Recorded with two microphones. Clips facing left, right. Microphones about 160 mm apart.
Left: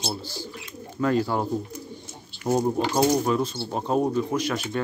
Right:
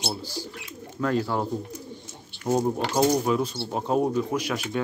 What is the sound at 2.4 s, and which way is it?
Speech, 10° left (ahead or behind).